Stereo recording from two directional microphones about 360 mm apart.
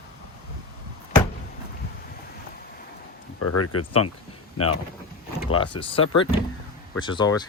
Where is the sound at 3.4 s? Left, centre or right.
Left.